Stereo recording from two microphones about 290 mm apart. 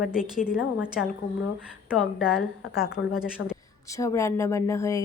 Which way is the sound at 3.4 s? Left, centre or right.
Left.